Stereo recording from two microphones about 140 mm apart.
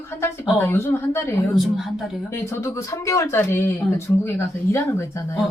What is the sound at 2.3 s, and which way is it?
Speech, 20° left (ahead or behind).